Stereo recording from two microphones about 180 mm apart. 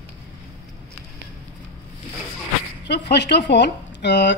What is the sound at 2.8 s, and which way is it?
Speech, 70° left (ahead or behind).